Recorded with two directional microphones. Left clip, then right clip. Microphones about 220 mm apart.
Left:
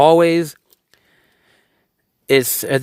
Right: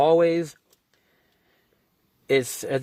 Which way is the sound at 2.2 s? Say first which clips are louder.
Left 7 dB; 35° left (ahead or behind).